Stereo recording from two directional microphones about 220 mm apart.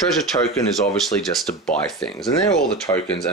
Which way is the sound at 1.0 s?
Centre (ahead or behind).